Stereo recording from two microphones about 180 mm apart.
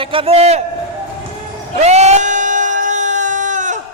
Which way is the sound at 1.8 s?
40° right (ahead or behind).